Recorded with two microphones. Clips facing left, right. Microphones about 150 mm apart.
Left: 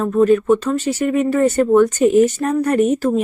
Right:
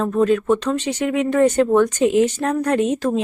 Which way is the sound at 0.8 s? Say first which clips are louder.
Left 3 dB; 90° right.